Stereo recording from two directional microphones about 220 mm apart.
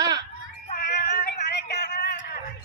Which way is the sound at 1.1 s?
45° left (ahead or behind).